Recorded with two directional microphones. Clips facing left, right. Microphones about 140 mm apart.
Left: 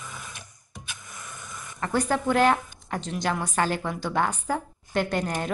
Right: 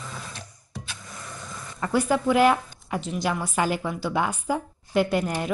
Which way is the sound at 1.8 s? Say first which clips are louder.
Right 2 dB; 10° right (ahead or behind).